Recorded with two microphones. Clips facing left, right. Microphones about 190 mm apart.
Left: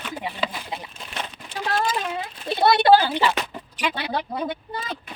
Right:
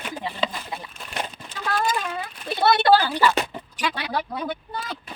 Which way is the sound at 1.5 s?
20° left (ahead or behind).